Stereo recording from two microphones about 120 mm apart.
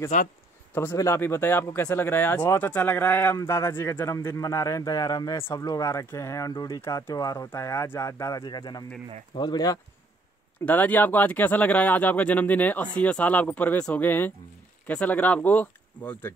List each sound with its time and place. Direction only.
0.1 s speech: 90° left
0.7 s speech: 20° left (ahead or behind)
10.6 s speech: 15° left (ahead or behind)